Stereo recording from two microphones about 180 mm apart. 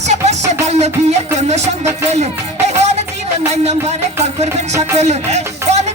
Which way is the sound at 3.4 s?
35° right (ahead or behind).